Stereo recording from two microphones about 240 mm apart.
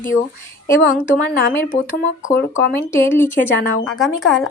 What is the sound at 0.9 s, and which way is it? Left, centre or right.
Speech, left.